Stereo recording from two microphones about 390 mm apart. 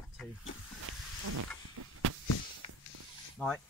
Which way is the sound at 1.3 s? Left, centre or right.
Right.